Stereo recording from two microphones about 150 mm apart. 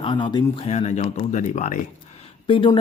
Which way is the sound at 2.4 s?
35° left (ahead or behind).